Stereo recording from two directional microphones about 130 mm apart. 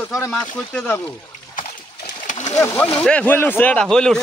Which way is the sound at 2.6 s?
20° left (ahead or behind).